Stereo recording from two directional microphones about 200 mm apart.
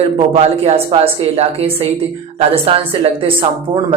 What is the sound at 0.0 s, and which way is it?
Speech, 30° right (ahead or behind).